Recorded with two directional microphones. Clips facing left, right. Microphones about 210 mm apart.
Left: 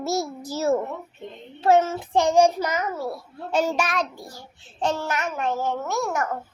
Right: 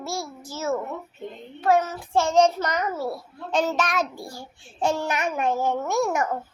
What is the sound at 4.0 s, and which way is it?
A child's voice, 10° right (ahead or behind).